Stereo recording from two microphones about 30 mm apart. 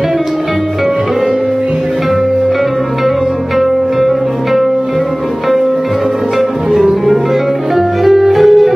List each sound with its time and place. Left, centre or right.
6.8 s music: centre